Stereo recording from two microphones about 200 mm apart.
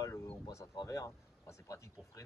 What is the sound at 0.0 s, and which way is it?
Speech, 15° left (ahead or behind).